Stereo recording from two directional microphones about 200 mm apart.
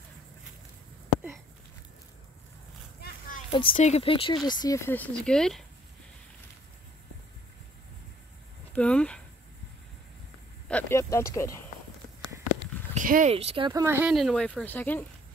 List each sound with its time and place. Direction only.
3.0 s children playing: 40° left (ahead or behind)
3.7 s speech: 35° left (ahead or behind); by 5.7 s centre (ahead or behind)
8.7 s speech: 5° left (ahead or behind)
10.7 s a sound: 10° left (ahead or behind)
12.9 s speech: 40° right (ahead or behind)
13.3 s speech: 30° right (ahead or behind); by 14.1 s 10° right (ahead or behind)
14.1 s speech: centre (ahead or behind)